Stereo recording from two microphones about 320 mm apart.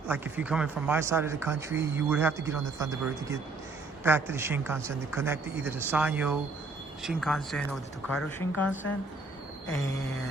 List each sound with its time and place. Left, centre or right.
0.1 s a man's voice: centre